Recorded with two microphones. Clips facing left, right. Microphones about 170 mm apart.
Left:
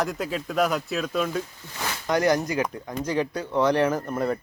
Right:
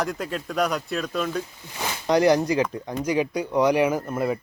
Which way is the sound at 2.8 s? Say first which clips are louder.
Right 2 dB; 10° right (ahead or behind).